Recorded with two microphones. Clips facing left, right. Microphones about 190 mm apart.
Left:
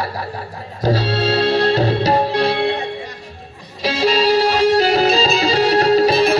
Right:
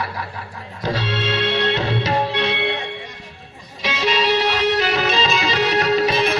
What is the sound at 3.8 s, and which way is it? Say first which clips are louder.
Music: left 5 dB; 35° left (ahead or behind).